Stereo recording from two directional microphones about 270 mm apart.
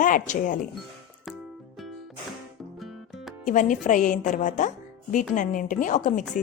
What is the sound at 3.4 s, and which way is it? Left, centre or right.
Speech, left.